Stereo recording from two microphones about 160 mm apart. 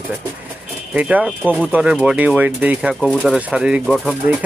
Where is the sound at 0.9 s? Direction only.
10° right (ahead or behind).